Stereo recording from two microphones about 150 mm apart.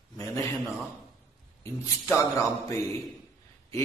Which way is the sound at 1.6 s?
20° left (ahead or behind).